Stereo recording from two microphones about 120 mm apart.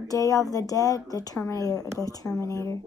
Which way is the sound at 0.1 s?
30° left (ahead or behind).